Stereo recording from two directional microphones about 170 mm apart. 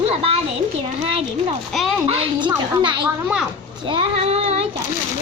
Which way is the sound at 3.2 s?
5° right (ahead or behind).